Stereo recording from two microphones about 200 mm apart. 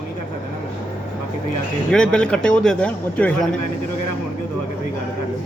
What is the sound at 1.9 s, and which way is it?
A man's voice, 5° left (ahead or behind).